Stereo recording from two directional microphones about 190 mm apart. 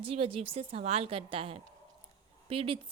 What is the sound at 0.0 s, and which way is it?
A woman's voice, 30° right (ahead or behind).